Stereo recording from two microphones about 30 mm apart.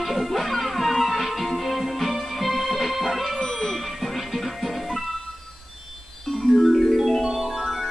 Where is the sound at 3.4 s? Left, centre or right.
Centre.